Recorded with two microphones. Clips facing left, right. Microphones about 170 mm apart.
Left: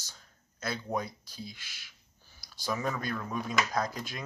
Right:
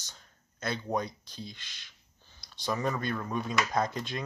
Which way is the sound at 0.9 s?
5° left (ahead or behind).